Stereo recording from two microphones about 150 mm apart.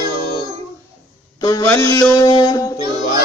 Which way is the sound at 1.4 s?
25° left (ahead or behind).